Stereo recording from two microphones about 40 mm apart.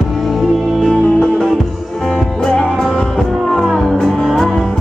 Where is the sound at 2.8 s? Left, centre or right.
Centre.